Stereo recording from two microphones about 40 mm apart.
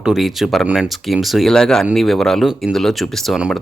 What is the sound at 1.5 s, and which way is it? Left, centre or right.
Speech, centre.